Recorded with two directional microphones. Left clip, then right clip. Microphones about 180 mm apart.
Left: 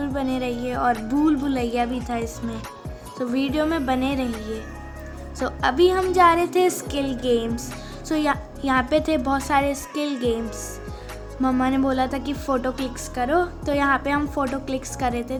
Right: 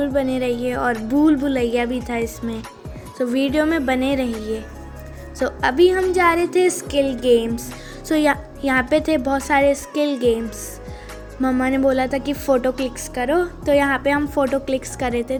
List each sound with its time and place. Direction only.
0.0 s a woman's voice: 15° right (ahead or behind)
11.5 s a woman's voice: 10° right (ahead or behind)